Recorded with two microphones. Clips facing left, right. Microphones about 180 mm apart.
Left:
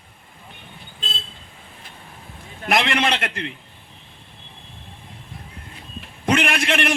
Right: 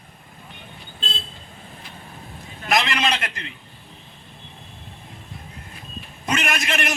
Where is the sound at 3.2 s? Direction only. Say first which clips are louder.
Left 5 dB; 60° left (ahead or behind).